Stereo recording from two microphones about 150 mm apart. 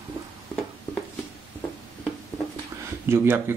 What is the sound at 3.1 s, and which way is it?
Speech, 15° right (ahead or behind).